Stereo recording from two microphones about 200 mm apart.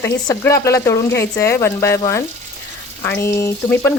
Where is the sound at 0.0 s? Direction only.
15° left (ahead or behind).